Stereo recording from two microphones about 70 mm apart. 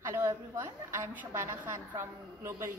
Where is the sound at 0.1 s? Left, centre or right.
Right.